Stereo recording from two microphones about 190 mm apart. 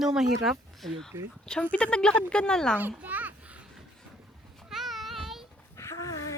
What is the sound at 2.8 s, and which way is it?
Children playing, 10° right (ahead or behind).